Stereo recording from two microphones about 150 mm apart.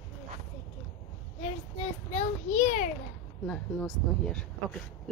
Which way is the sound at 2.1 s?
45° left (ahead or behind).